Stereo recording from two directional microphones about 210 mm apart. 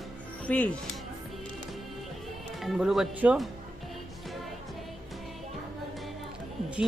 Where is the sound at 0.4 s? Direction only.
5° left (ahead or behind).